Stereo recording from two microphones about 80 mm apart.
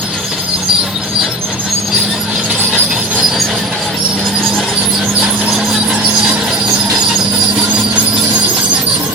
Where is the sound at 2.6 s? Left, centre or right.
Centre.